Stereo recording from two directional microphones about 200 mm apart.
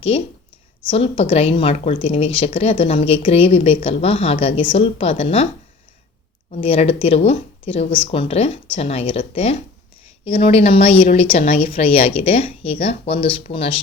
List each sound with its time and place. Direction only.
0.1 s a woman's voice: 30° left (ahead or behind)
6.5 s a woman's voice: 30° left (ahead or behind)